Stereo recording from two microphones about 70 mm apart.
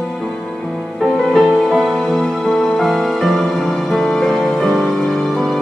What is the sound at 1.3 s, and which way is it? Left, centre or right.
Music, centre.